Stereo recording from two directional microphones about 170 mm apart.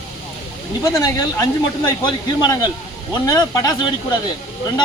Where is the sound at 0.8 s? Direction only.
20° left (ahead or behind).